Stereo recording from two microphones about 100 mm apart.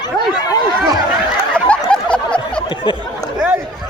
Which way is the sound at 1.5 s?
10° left (ahead or behind).